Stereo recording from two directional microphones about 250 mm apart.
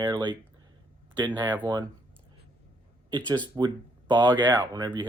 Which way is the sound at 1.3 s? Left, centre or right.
Centre.